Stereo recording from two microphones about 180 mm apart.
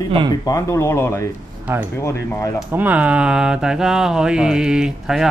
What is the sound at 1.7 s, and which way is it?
Speech, 15° right (ahead or behind).